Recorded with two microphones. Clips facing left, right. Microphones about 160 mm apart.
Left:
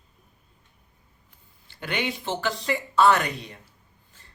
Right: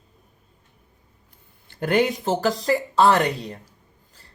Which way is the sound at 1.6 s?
45° right (ahead or behind).